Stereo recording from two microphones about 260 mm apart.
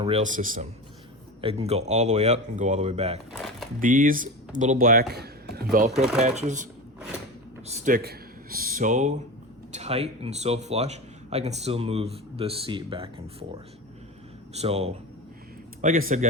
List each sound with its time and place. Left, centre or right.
0.0 s speech: right
3.3 s a sound: centre
3.8 s speech: right
5.9 s speech: centre
6.2 s speech: right
7.7 s speech: right